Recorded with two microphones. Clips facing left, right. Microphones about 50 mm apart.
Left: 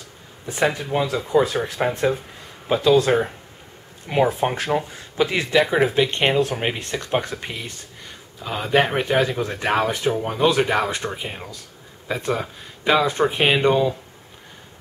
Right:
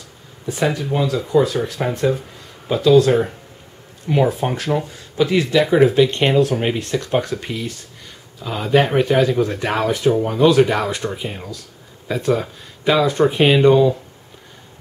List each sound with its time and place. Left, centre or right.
0.5 s speech: centre